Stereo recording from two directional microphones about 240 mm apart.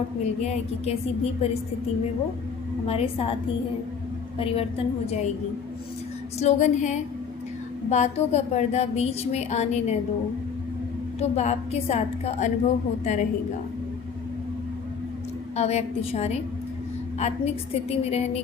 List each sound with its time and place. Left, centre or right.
0.4 s a woman's voice: left
2.8 s a woman's voice: left
4.4 s a woman's voice: left
6.4 s a woman's voice: left
11.2 s a woman's voice: left
15.5 s a woman's voice: left